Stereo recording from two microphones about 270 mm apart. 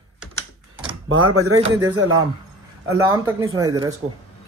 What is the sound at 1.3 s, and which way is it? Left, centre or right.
Speech, right.